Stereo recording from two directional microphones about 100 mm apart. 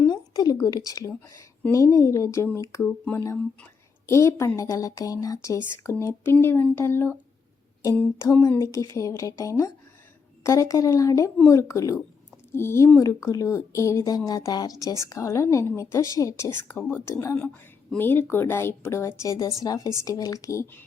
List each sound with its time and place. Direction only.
0.0 s a woman's voice: 40° left (ahead or behind)
4.0 s a woman's voice: 30° left (ahead or behind)
8.2 s a woman's voice: 25° left (ahead or behind)